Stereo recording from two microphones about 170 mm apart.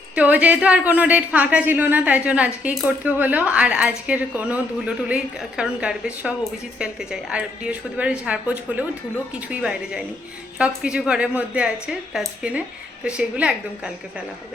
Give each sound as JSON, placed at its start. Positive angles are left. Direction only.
{"t": 0.2, "sound": "a woman's voice", "side_deg": -10}